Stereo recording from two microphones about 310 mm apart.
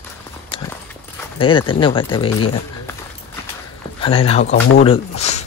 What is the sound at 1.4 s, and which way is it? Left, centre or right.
Speech, centre.